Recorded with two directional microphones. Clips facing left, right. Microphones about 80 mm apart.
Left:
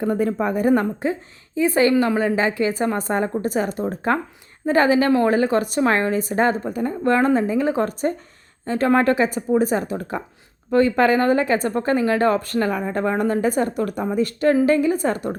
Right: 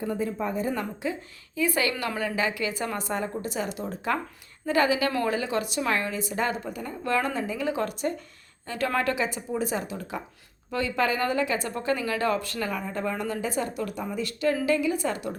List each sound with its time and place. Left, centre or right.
0.0 s a woman's voice: left
0.7 s speech: left
1.5 s speech: left